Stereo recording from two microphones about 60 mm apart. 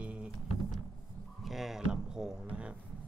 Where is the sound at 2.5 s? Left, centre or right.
Centre.